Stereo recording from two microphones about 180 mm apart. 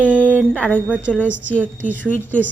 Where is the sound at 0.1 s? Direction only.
10° left (ahead or behind).